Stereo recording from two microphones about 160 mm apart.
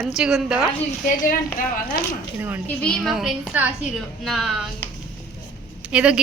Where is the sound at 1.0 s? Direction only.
55° left (ahead or behind).